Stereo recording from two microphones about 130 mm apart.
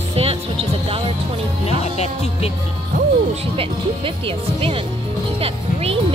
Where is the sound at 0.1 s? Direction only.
50° right (ahead or behind).